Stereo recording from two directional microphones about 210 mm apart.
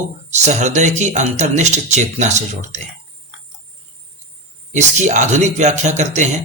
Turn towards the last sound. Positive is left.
turn(degrees=-35)  # may be behind; listen again after turning